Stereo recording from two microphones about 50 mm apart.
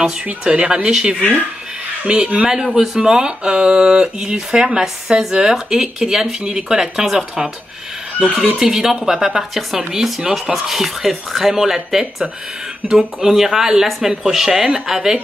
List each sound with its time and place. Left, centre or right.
0.4 s speech: centre
8.5 s speech: centre